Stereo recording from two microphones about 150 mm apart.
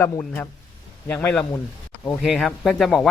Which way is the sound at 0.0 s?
15° left (ahead or behind).